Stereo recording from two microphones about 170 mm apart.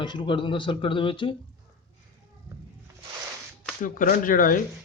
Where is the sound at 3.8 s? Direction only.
55° left (ahead or behind).